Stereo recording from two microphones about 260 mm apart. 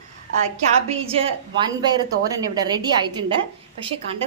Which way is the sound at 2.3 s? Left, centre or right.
Centre.